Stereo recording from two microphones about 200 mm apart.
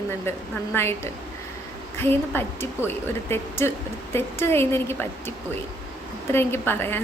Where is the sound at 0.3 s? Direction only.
10° left (ahead or behind).